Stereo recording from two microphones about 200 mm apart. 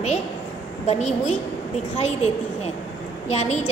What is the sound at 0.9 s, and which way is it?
A woman's voice, 35° left (ahead or behind).